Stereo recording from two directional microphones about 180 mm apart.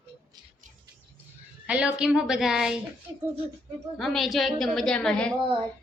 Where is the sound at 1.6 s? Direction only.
5° right (ahead or behind).